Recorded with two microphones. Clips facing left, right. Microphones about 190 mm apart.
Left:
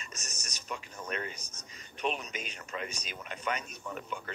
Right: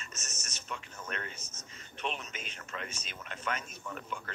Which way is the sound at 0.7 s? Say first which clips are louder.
Left 3 dB; 15° left (ahead or behind).